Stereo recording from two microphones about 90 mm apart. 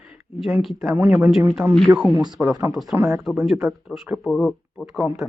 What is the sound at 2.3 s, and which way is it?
Speech, 35° right (ahead or behind).